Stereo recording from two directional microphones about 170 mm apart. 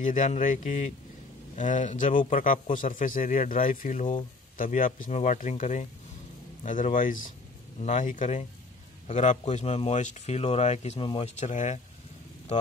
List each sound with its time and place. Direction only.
0.0 s a man's voice: 50° left (ahead or behind)